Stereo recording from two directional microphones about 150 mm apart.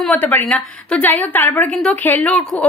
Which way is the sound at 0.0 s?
10° left (ahead or behind).